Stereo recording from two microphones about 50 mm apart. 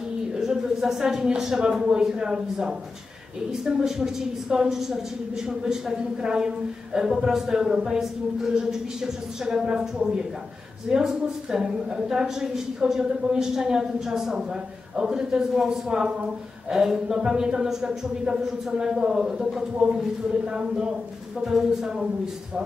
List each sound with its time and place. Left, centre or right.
0.3 s a woman's voice: centre